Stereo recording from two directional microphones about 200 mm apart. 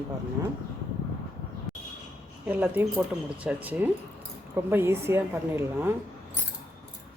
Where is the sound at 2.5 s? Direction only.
10° right (ahead or behind).